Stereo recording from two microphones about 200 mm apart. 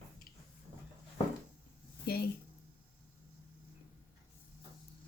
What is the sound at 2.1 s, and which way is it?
Speech, 50° left (ahead or behind).